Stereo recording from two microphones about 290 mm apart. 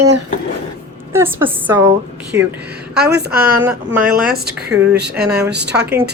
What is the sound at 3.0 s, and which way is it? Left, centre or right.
Speech, right.